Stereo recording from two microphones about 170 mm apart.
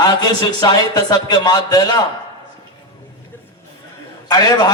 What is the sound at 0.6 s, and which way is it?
A man's voice, 25° left (ahead or behind).